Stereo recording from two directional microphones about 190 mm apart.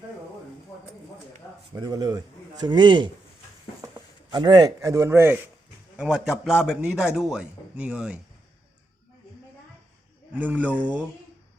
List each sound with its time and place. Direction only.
1.7 s a man's voice: 20° right (ahead or behind)
4.3 s a man's voice: 25° right (ahead or behind); by 8.2 s 5° right (ahead or behind)
10.3 s a man's voice: 10° right (ahead or behind)